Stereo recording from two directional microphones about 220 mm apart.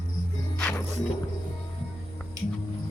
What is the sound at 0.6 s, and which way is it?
Music, 5° left (ahead or behind).